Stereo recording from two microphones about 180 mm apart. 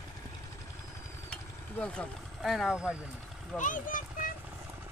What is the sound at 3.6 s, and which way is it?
Speech, 45° left (ahead or behind).